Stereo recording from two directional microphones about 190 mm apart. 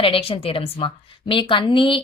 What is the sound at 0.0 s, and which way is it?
Speech, 30° left (ahead or behind).